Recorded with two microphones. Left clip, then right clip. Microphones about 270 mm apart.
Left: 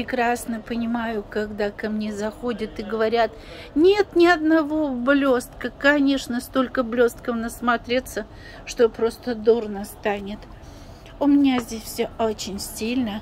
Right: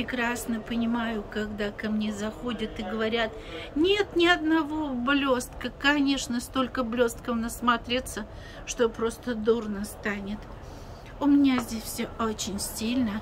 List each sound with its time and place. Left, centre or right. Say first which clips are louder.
0.0 s a woman's voice: left 7 dB; centre
11.1 s a woman's voice: left 4 dB; centre